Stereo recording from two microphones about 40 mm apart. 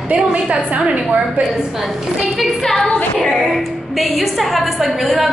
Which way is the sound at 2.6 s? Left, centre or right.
Centre.